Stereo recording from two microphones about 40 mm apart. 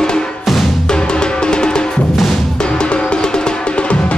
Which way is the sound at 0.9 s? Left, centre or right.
Left.